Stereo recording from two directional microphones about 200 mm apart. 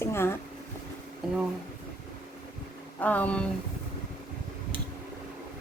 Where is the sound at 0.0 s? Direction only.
10° left (ahead or behind).